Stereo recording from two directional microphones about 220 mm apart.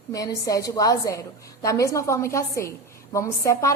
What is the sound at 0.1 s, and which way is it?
A woman's voice, 15° left (ahead or behind).